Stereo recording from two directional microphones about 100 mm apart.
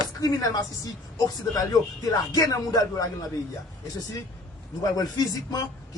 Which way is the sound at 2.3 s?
35° left (ahead or behind).